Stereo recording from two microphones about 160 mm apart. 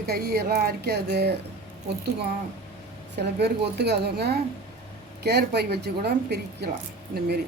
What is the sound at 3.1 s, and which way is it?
Speech, 90° right.